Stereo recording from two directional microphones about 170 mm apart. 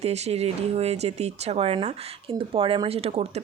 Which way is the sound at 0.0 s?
40° right (ahead or behind).